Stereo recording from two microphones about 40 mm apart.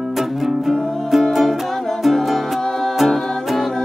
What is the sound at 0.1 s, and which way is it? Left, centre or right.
Music, centre.